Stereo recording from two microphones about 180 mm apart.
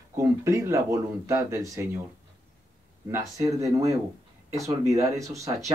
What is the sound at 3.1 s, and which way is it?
Speech, 15° right (ahead or behind).